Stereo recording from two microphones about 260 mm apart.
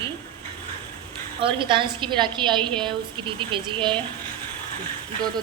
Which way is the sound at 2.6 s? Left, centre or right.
Centre.